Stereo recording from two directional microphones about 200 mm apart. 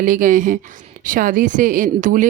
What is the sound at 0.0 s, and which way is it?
A woman's voice, 40° right (ahead or behind).